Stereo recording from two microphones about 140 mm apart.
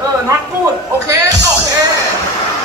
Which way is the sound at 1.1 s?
25° right (ahead or behind).